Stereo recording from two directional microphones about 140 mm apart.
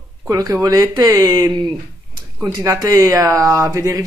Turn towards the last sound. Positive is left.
turn(degrees=-20)  # may be behind; listen again after turning